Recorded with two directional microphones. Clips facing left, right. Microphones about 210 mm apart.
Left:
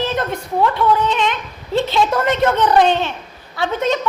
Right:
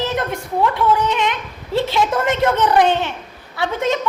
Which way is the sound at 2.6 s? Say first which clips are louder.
Left 1 dB; 15° right (ahead or behind).